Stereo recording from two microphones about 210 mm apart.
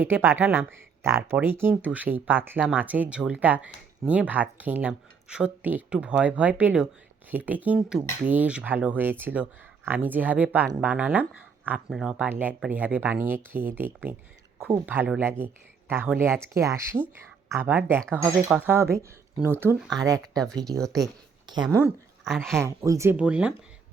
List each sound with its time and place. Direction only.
0.0 s speech: 10° right (ahead or behind)
20.7 s speech: centre (ahead or behind)
21.4 s speech: 20° right (ahead or behind)
22.2 s speech: centre (ahead or behind)
22.5 s speech: 15° right (ahead or behind)